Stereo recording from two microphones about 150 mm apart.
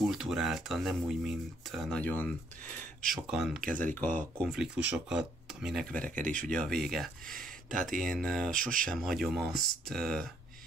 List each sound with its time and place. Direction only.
0.0 s speech: centre (ahead or behind)
3.3 s speech: 5° right (ahead or behind)
3.8 s speech: 10° left (ahead or behind)
4.5 s speech: 5° right (ahead or behind)
7.2 s speech: 65° right (ahead or behind)
8.0 s speech: centre (ahead or behind)
8.5 s speech: 65° right (ahead or behind)
8.8 s speech: centre (ahead or behind)